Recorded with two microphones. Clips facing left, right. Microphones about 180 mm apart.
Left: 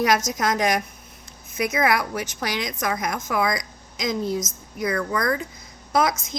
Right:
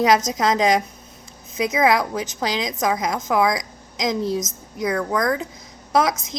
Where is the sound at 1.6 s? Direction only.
90° right.